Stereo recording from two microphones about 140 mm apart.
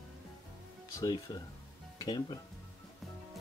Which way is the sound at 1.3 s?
25° left (ahead or behind).